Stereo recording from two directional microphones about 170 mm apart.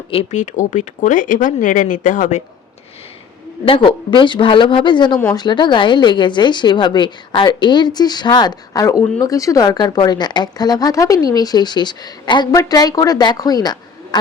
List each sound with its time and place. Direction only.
0.1 s speech: 40° left (ahead or behind)
3.7 s a woman's voice: 30° left (ahead or behind)